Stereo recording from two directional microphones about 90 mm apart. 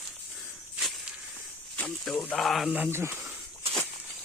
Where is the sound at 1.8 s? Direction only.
5° left (ahead or behind).